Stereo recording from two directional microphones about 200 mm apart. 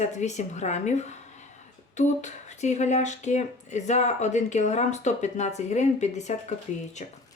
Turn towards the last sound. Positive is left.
turn(degrees=35)  # may be behind; listen again after turning